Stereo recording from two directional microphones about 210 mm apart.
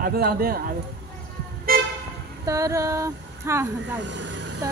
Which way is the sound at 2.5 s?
15° right (ahead or behind).